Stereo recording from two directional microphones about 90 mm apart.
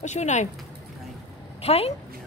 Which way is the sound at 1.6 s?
90° left.